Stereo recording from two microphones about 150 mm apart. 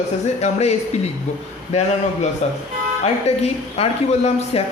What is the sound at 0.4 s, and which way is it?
Speech, 45° left (ahead or behind).